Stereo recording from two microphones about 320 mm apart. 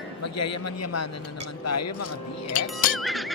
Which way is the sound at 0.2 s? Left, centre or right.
Left.